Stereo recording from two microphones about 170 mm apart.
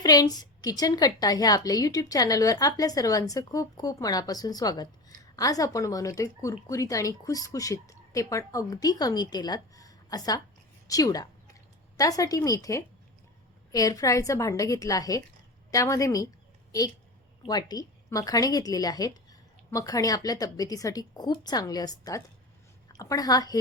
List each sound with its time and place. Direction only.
0.0 s a woman's voice: 20° left (ahead or behind)
17.4 s a woman's voice: 25° left (ahead or behind)